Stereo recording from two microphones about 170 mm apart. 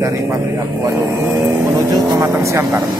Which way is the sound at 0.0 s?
15° right (ahead or behind).